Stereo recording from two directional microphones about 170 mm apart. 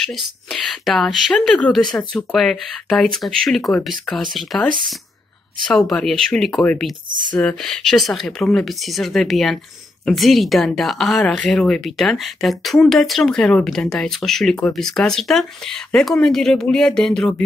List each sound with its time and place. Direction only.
0.0 s a woman's voice: centre (ahead or behind)
5.7 s a woman's voice: centre (ahead or behind)
7.1 s speech: 50° right (ahead or behind)
7.3 s a woman's voice: 5° left (ahead or behind)